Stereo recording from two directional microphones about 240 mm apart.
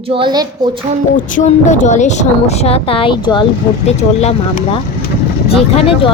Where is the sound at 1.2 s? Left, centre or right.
Left.